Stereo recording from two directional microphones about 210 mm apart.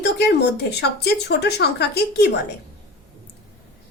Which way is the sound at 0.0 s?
50° left (ahead or behind).